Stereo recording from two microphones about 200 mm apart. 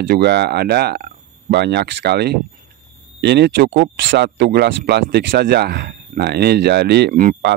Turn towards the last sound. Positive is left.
turn(degrees=-40)  # may be behind; listen again after turning